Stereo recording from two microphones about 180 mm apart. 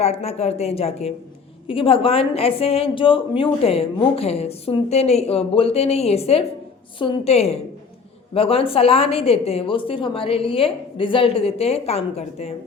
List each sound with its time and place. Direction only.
0.0 s a woman's voice: 35° left (ahead or behind)